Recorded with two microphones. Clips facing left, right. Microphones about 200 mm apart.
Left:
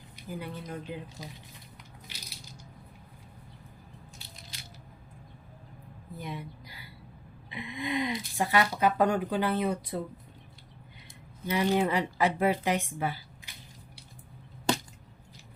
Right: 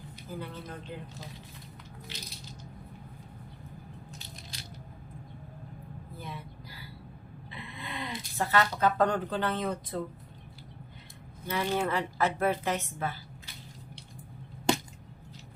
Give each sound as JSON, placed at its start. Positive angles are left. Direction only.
{"t": 0.3, "sound": "a woman's voice", "side_deg": 15}
{"t": 2.0, "sound": "coin", "side_deg": 10}
{"t": 6.1, "sound": "a sound", "side_deg": 15}
{"t": 7.5, "sound": "speech", "side_deg": 15}
{"t": 11.4, "sound": "a woman's voice", "side_deg": 15}